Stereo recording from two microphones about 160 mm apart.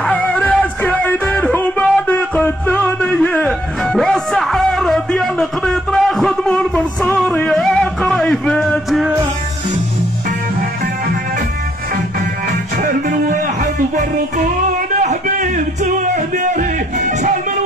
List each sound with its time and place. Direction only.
0.0 s music: 10° left (ahead or behind)
12.7 s music: 55° right (ahead or behind)